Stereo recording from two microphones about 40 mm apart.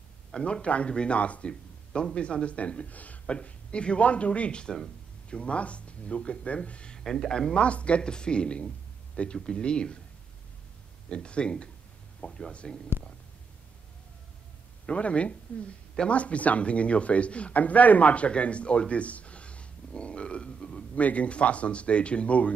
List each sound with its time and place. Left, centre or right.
0.4 s speech: left
1.5 s speech: left
3.3 s speech: left
7.0 s speech: centre
7.5 s speech: left
11.1 s speech: left
14.9 s speech: left
20.9 s speech: left